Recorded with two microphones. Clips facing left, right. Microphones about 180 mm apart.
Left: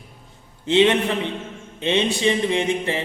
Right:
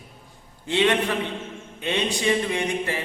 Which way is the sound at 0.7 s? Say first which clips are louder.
Left 4 dB; 25° left (ahead or behind).